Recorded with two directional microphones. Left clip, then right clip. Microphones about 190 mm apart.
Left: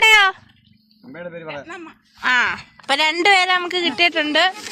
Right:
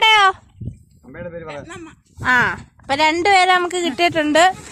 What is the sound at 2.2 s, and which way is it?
Speech, 20° right (ahead or behind).